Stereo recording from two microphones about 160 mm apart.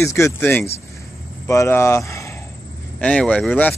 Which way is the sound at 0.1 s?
15° left (ahead or behind).